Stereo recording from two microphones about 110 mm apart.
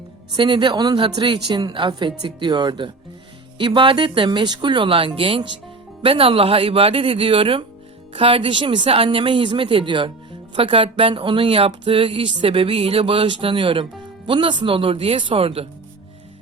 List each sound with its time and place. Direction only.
0.3 s speech: 45° right (ahead or behind)